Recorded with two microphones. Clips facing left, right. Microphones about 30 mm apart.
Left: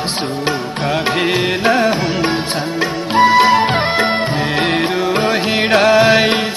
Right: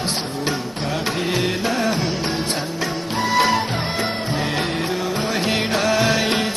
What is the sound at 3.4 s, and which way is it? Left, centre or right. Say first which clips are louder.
Music: left 7 dB; left.